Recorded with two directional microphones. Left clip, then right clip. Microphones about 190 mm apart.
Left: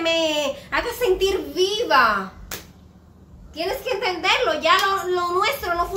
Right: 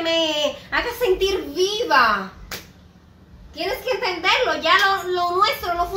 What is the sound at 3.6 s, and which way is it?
A child's voice, 15° left (ahead or behind).